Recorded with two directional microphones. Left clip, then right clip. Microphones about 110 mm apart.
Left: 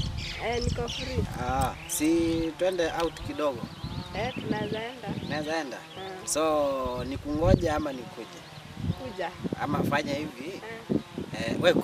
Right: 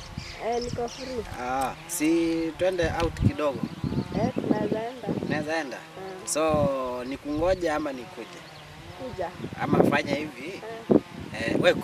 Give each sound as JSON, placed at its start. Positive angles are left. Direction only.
{"t": 0.4, "sound": "speech", "side_deg": 40}
{"t": 1.4, "sound": "speech", "side_deg": 5}
{"t": 4.1, "sound": "speech", "side_deg": 35}
{"t": 5.3, "sound": "speech", "side_deg": 5}
{"t": 9.6, "sound": "speech", "side_deg": 5}